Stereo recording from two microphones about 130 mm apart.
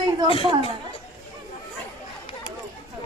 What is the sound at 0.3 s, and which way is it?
Speech, 45° left (ahead or behind).